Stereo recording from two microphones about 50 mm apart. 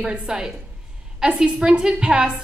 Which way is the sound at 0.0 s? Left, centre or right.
Centre.